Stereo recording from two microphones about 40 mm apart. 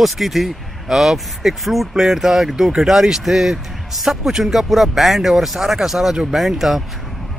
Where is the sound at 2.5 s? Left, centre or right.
Right.